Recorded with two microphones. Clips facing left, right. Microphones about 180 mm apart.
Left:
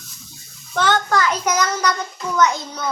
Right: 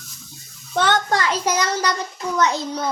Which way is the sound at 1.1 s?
30° right (ahead or behind).